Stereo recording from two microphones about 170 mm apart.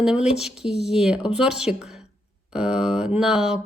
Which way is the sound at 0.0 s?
5° right (ahead or behind).